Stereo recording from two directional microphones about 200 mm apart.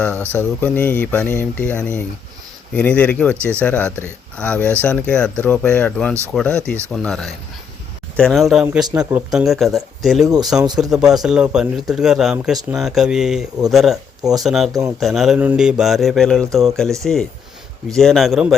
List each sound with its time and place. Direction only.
0.3 s speech: 5° left (ahead or behind)
10.2 s speech: 20° right (ahead or behind)
10.9 s speech: centre (ahead or behind)